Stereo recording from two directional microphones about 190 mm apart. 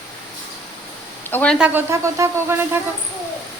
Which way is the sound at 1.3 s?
10° left (ahead or behind).